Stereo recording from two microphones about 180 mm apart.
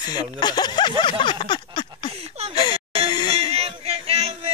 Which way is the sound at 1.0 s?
25° left (ahead or behind).